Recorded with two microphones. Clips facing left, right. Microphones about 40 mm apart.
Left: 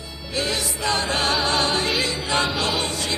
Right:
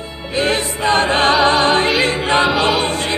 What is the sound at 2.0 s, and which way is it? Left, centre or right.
Choir, right.